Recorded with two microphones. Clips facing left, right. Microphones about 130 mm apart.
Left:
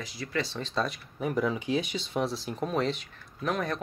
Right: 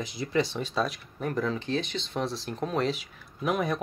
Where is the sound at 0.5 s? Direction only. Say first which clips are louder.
Right 2 dB; 10° right (ahead or behind).